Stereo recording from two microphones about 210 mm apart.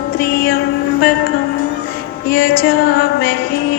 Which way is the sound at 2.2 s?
45° left (ahead or behind).